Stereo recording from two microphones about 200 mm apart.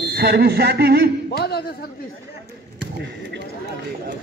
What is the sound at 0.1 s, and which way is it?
Speech, 55° right (ahead or behind).